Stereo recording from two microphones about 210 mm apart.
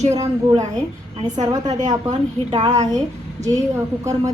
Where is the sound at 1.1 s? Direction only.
20° right (ahead or behind).